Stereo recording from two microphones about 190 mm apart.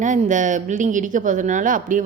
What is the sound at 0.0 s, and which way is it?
Speech, 40° right (ahead or behind).